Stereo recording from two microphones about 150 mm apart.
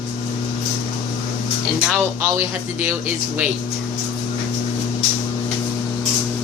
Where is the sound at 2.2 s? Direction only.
15° right (ahead or behind).